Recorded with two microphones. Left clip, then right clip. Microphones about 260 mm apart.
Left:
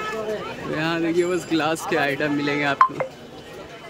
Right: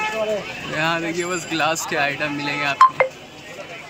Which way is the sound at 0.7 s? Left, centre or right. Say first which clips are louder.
Right 2 dB; centre.